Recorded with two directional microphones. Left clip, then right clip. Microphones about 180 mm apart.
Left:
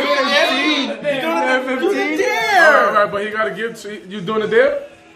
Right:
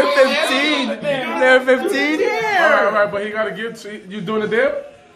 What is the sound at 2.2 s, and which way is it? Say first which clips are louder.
Music: left 2 dB; 40° left (ahead or behind).